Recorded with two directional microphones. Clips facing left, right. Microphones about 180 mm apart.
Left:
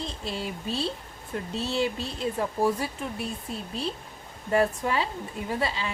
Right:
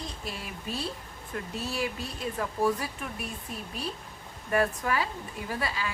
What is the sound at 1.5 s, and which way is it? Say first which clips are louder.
Speech: left 5 dB; 25° left (ahead or behind).